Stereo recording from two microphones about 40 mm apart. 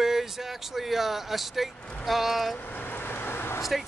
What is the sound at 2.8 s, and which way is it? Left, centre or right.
Vehicle, left.